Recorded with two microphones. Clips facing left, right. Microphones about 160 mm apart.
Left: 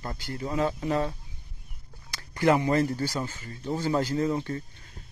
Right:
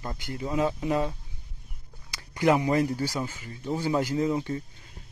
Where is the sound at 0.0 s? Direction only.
15° right (ahead or behind).